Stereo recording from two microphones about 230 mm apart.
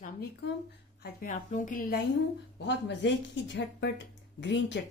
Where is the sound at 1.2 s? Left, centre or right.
Left.